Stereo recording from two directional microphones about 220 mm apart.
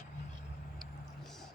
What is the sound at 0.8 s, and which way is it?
Vehicle, centre (ahead or behind).